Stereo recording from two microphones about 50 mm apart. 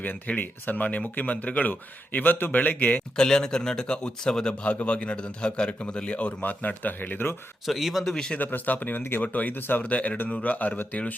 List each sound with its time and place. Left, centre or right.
0.3 s speech: left
3.2 s speech: centre; by 7.3 s left
7.6 s a man's voice: centre
8.1 s a man's voice: centre
8.4 s speech: left
9.2 s speech: left
9.8 s speech: left